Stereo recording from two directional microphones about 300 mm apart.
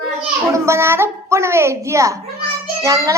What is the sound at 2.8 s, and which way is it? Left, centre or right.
Child singing, centre.